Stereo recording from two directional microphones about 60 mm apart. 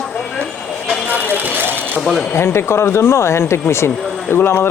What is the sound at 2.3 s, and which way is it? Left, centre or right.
A man's voice, left.